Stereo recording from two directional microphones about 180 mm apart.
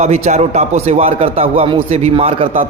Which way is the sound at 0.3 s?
40° right (ahead or behind).